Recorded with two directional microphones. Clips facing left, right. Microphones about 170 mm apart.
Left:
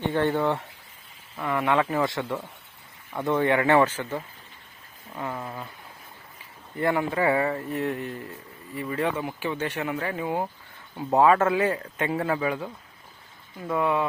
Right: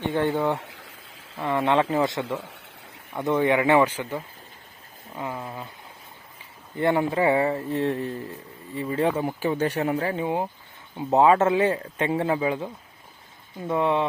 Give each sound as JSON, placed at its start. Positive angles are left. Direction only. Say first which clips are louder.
{"t": 0.0, "sound": "speech", "louder": "even", "side_deg": -15}
{"t": 6.7, "sound": "speech", "louder": "right 2 dB", "side_deg": -25}